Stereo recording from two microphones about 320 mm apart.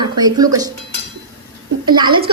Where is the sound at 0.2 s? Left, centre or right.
Centre.